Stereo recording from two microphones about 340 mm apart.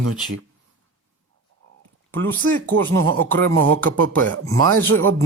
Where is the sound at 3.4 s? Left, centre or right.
Right.